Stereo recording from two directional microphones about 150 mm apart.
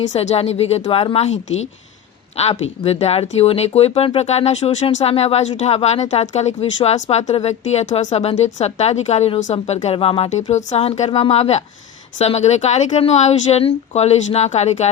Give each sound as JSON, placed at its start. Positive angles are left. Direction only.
{"t": 0.1, "sound": "speech", "side_deg": 45}